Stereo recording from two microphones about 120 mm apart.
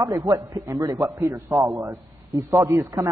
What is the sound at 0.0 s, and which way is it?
A man's voice, 30° right (ahead or behind).